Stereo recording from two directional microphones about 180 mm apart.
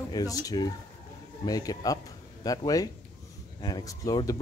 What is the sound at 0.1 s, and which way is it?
A man's voice, 20° left (ahead or behind).